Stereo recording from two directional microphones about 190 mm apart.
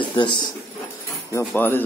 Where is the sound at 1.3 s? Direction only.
10° left (ahead or behind).